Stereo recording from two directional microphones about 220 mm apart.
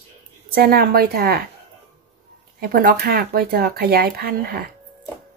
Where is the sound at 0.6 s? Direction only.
45° right (ahead or behind).